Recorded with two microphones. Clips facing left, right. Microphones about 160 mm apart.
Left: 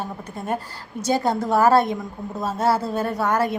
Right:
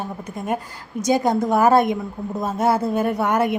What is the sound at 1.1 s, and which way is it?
A woman's voice, 15° right (ahead or behind).